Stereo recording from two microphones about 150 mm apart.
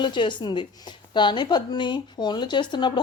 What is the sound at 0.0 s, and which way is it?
Speech, 30° left (ahead or behind).